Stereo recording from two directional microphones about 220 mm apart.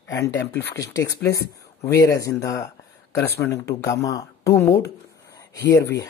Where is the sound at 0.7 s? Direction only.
15° left (ahead or behind).